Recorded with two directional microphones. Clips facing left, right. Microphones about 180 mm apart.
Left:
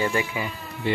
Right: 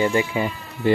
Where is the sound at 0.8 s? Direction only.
45° right (ahead or behind).